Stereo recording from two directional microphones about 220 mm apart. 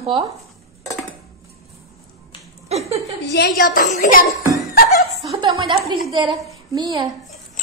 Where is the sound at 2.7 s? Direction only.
30° right (ahead or behind).